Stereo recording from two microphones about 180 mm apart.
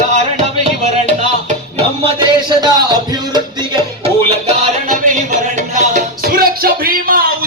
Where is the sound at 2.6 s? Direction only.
25° right (ahead or behind).